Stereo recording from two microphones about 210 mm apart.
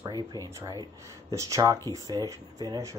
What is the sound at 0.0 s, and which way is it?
Speech, 20° right (ahead or behind).